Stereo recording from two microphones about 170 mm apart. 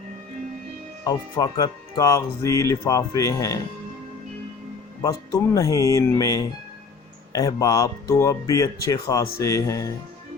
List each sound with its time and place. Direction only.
1.0 s speech: 20° left (ahead or behind)
5.0 s speech: 20° left (ahead or behind)